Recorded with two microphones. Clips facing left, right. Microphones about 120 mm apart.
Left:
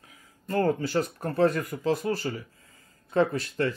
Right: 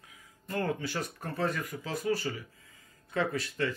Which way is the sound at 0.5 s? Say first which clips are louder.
Left 8 dB; 35° left (ahead or behind).